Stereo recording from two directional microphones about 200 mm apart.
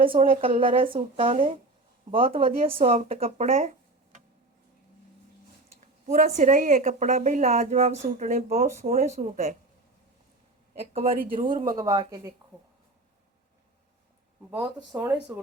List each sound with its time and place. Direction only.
0.0 s speech: 25° right (ahead or behind)
6.1 s a woman's voice: 40° right (ahead or behind)
11.0 s speech: 45° right (ahead or behind)
11.6 s speech: 20° right (ahead or behind)
14.9 s speech: 10° right (ahead or behind)